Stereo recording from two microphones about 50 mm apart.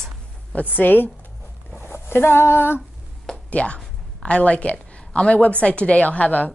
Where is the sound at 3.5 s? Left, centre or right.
Left.